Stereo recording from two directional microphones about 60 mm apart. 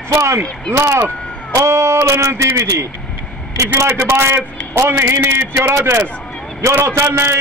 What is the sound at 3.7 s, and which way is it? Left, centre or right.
A man's voice, right.